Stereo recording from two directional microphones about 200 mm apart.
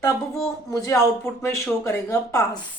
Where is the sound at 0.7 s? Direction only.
15° left (ahead or behind).